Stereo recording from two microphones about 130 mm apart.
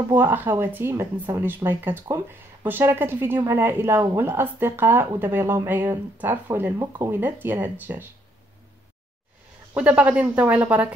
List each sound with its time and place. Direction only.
0.1 s speech: 15° right (ahead or behind)
9.8 s speech: 10° right (ahead or behind)